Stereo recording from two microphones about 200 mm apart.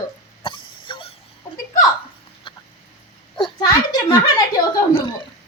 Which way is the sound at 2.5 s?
25° left (ahead or behind).